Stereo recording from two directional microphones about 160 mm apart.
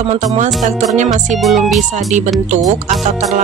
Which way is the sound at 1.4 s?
Centre (ahead or behind).